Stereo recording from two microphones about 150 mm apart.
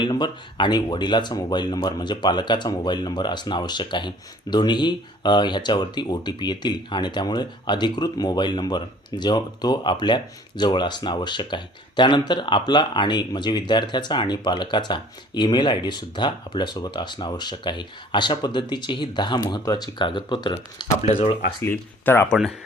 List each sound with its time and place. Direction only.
0.0 s speech: 30° left (ahead or behind)
20.9 s speech: 45° left (ahead or behind)
21.6 s speech: 15° left (ahead or behind)